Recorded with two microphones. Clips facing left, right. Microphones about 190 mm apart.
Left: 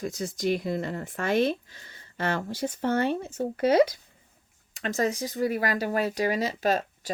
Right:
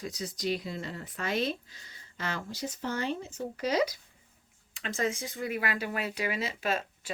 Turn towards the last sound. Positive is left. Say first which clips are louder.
# left 6 dB
turn(degrees=40)  # may be behind; listen again after turning